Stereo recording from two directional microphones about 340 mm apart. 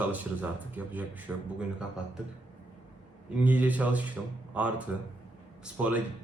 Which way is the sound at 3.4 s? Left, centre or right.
Centre.